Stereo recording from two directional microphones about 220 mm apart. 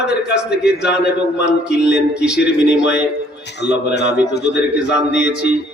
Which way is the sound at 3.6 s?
50° left (ahead or behind).